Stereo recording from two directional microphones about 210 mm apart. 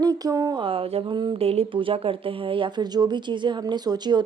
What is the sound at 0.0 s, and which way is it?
Speech, 20° right (ahead or behind).